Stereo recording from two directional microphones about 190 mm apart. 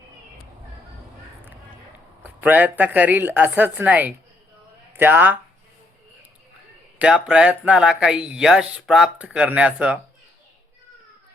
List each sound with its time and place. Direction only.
2.2 s a woman's voice: 10° right (ahead or behind)
7.0 s speech: 5° right (ahead or behind)